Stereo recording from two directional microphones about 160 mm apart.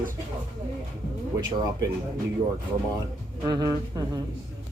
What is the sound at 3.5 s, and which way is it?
Speech, 25° right (ahead or behind).